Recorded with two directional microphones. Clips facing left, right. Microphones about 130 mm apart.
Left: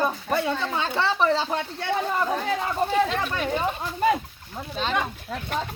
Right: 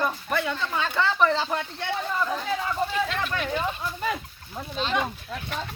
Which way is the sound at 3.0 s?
35° left (ahead or behind).